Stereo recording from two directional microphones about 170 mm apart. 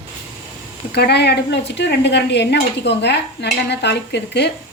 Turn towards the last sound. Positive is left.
turn(degrees=85)